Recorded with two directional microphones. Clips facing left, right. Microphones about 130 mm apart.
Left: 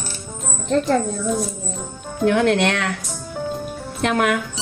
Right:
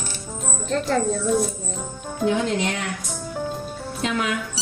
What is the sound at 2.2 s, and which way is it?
Speech, 70° left (ahead or behind).